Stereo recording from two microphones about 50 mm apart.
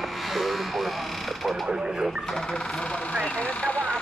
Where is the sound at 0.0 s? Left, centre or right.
Centre.